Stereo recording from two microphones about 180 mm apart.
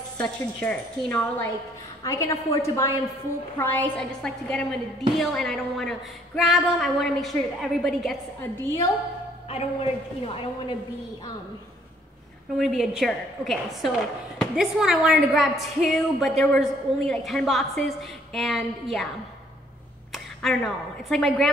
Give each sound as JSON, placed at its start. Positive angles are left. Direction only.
{"t": 0.2, "sound": "a woman's voice", "side_deg": 5}
{"t": 2.0, "sound": "a woman's voice", "side_deg": 20}
{"t": 8.6, "sound": "a woman's voice", "side_deg": 15}
{"t": 9.5, "sound": "a woman's voice", "side_deg": 35}
{"t": 12.5, "sound": "a woman's voice", "side_deg": 0}
{"t": 20.1, "sound": "speech", "side_deg": 0}